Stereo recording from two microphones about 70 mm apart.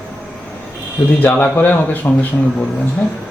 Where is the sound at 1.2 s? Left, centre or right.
Left.